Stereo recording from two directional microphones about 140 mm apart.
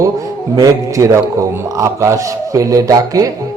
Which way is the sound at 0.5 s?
25° right (ahead or behind).